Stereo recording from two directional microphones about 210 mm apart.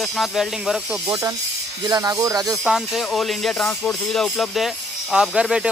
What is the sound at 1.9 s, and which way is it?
Speech, 15° right (ahead or behind).